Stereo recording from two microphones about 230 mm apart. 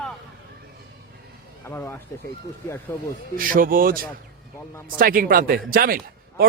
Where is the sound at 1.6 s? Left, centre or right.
Centre.